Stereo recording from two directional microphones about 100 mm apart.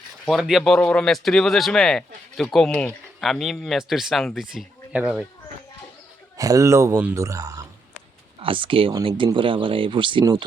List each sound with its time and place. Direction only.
0.3 s speech: 5° right (ahead or behind)
6.3 s speech: 35° right (ahead or behind)
8.4 s speech: 60° right (ahead or behind)